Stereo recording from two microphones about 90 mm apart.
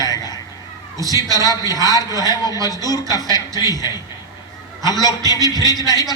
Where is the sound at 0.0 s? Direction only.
45° left (ahead or behind).